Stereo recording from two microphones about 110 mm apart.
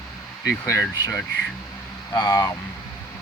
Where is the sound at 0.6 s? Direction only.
25° left (ahead or behind).